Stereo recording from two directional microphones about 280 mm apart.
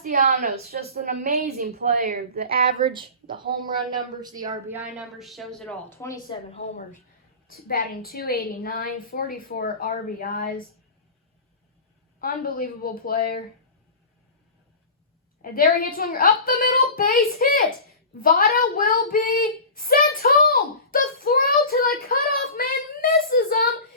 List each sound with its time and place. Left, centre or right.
0.0 s a woman's voice: right
4.2 s speech: centre
7.4 s a woman's voice: left
12.2 s a woman's voice: left
15.4 s a woman's voice: left
20.5 s child singing: left